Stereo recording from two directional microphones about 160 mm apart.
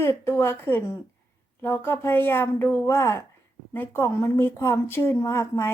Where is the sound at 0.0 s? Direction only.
15° left (ahead or behind).